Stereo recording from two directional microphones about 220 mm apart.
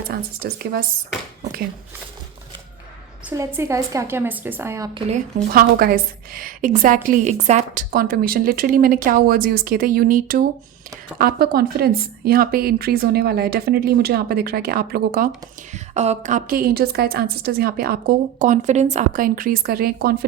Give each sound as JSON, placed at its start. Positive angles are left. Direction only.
{"t": 0.1, "sound": "a woman's voice", "side_deg": -45}
{"t": 3.2, "sound": "a woman's voice", "side_deg": -10}
{"t": 5.0, "sound": "a woman's voice", "side_deg": -35}
{"t": 15.7, "sound": "a woman's voice", "side_deg": -30}